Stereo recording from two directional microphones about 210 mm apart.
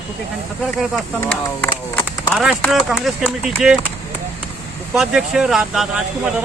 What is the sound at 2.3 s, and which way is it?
Speech, centre (ahead or behind).